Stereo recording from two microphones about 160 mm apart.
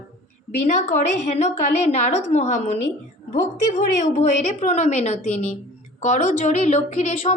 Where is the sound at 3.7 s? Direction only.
45° left (ahead or behind).